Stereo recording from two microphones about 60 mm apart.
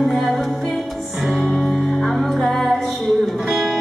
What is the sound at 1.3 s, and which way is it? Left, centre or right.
Music, left.